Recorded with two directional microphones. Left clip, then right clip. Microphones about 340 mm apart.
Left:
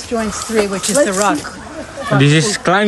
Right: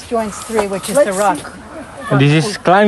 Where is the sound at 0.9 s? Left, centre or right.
Right.